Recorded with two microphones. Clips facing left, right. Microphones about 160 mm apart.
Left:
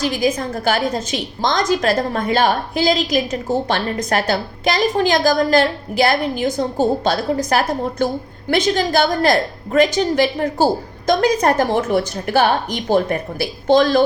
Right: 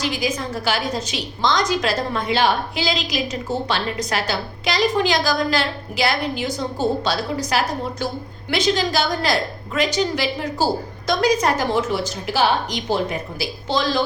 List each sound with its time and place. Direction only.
0.0 s a woman's voice: 50° left (ahead or behind)